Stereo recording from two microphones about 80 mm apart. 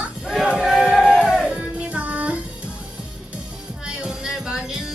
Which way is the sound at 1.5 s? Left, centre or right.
Centre.